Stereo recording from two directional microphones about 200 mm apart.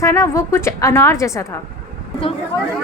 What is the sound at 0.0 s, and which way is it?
A woman's voice, 15° left (ahead or behind).